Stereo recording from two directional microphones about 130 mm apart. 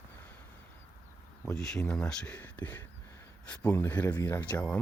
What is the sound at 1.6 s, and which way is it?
Speech, 5° left (ahead or behind).